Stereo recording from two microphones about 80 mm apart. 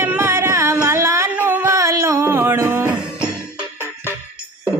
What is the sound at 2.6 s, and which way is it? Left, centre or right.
Music, right.